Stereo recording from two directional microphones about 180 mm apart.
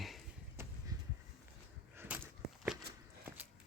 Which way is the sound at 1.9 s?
10° right (ahead or behind).